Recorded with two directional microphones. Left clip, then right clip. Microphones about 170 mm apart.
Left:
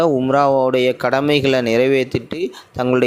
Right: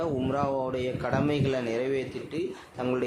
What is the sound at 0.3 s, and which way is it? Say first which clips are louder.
Speech: left 14 dB; 45° left (ahead or behind).